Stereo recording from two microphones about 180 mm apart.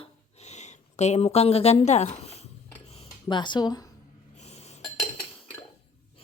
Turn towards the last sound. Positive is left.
turn(degrees=35)  # may be behind; listen again after turning